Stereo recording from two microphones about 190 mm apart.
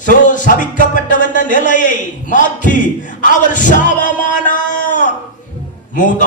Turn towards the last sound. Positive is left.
turn(degrees=45)  # may be behind; listen again after turning